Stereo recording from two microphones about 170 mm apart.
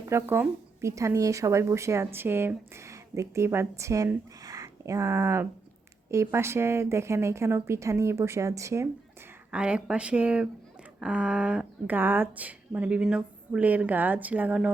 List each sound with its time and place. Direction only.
0.1 s a woman's voice: 15° right (ahead or behind)
9.5 s speech: 5° right (ahead or behind)